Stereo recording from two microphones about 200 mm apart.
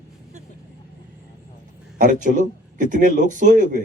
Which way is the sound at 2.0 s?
40° right (ahead or behind).